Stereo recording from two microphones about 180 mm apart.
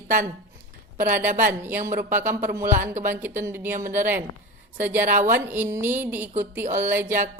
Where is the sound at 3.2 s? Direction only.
10° right (ahead or behind).